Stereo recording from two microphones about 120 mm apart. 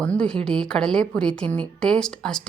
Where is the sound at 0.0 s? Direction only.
10° left (ahead or behind).